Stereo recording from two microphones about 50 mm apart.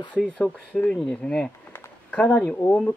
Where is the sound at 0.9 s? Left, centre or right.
Centre.